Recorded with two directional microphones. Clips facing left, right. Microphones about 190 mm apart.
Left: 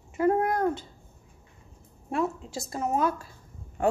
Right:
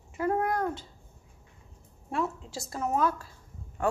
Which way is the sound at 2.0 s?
20° left (ahead or behind).